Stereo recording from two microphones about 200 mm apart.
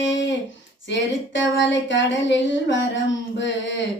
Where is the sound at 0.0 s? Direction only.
65° left (ahead or behind).